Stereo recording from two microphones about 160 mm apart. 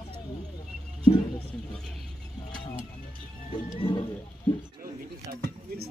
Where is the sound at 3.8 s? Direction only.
35° left (ahead or behind).